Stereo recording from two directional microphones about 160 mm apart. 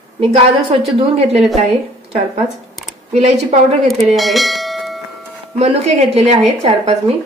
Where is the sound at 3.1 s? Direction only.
45° right (ahead or behind).